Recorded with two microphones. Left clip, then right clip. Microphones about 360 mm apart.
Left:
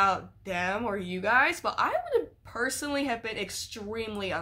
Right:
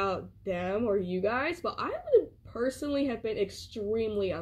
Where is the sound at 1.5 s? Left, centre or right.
Centre.